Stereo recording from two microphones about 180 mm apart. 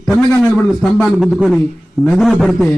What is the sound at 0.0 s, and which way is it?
A man's voice, 5° left (ahead or behind).